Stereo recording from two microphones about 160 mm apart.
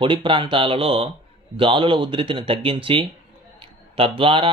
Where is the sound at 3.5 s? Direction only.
35° right (ahead or behind).